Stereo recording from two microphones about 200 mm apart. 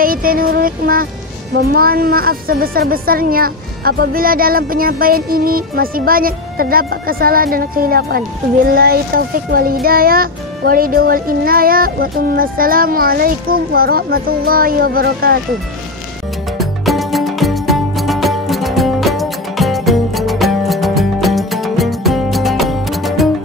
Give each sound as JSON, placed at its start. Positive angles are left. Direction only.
{"t": 0.0, "sound": "a woman's voice", "side_deg": -45}
{"t": 16.5, "sound": "music", "side_deg": 0}